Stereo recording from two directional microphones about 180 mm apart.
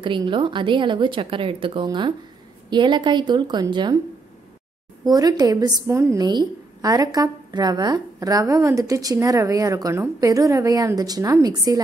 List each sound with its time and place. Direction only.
0.0 s a woman's voice: 25° right (ahead or behind)
5.0 s a woman's voice: 20° right (ahead or behind)